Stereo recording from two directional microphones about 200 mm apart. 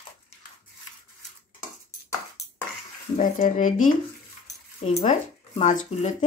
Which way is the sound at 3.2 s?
40° left (ahead or behind).